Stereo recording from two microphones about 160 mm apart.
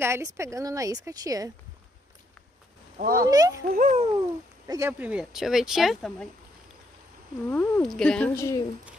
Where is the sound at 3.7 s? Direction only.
60° right (ahead or behind).